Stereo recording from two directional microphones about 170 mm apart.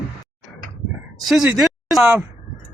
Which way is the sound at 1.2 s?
5° right (ahead or behind).